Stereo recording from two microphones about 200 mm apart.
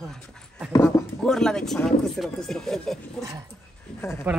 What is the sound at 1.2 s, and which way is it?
Speech, 5° left (ahead or behind).